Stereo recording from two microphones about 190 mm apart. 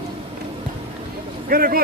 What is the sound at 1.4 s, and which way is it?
Speech, 50° right (ahead or behind).